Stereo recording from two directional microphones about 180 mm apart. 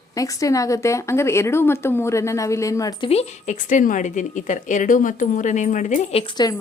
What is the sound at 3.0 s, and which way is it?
A woman's voice, 40° left (ahead or behind).